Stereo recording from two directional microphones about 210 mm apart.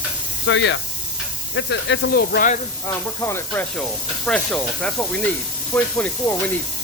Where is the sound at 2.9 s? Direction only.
10° left (ahead or behind).